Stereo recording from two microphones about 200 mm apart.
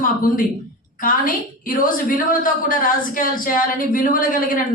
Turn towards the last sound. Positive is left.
turn(degrees=45)  # may be behind; listen again after turning